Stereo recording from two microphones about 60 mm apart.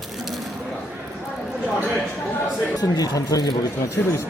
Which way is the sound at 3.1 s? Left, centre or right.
Left.